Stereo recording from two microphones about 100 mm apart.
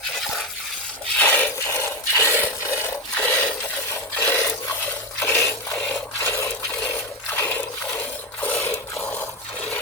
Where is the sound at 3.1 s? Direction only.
15° left (ahead or behind).